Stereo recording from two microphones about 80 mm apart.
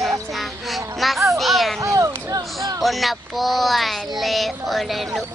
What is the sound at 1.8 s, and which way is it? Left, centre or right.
Speech, right.